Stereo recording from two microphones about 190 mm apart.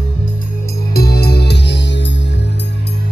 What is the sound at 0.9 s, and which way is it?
Music, 55° left (ahead or behind).